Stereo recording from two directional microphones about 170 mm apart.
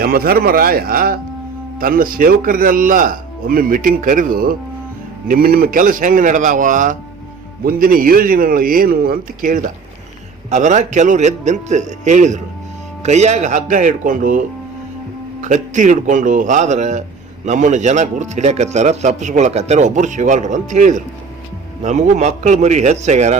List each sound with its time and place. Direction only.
0.0 s a man's voice: 60° right (ahead or behind); by 23.4 s 45° right (ahead or behind)